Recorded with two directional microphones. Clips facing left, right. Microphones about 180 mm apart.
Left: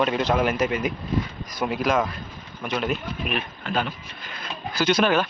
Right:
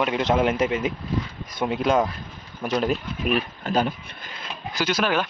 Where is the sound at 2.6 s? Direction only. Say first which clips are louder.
Right 3 dB; 35° right (ahead or behind).